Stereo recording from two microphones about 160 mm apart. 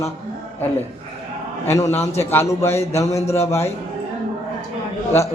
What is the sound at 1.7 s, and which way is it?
A man's voice, 20° left (ahead or behind).